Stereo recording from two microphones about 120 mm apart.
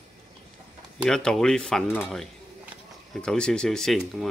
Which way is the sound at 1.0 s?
5° left (ahead or behind).